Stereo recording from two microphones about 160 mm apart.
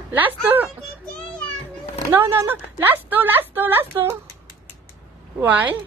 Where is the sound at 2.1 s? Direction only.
15° right (ahead or behind).